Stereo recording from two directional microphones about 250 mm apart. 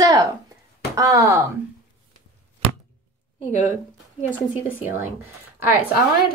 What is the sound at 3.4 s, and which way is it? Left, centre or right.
Speech, left.